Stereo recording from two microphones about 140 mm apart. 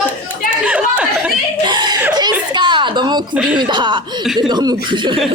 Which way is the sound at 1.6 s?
30° right (ahead or behind).